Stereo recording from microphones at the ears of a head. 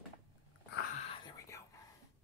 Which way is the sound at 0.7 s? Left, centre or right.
Left.